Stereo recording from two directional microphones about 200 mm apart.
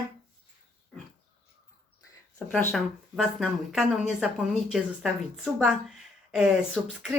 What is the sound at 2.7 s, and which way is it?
Speech, centre (ahead or behind).